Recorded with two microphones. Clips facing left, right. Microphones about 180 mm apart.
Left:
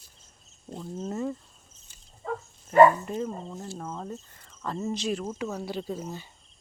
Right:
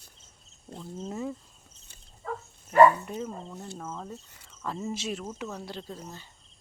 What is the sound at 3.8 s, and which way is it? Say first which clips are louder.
Speech: left 1 dB; 10° left (ahead or behind).